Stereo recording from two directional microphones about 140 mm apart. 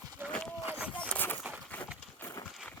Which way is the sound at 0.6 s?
15° right (ahead or behind).